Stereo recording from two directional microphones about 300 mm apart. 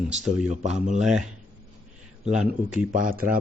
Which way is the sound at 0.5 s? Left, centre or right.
Right.